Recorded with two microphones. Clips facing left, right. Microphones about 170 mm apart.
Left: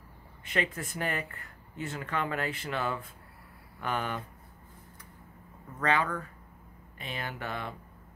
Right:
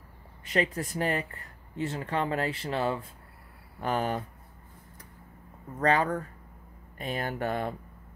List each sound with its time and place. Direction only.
0.5 s speech: 35° right (ahead or behind)
5.8 s speech: 40° right (ahead or behind)